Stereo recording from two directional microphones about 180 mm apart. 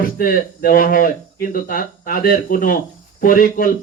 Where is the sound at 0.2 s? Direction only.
50° left (ahead or behind).